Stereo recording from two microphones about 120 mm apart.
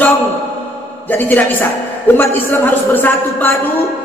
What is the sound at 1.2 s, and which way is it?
A man's voice, 15° left (ahead or behind).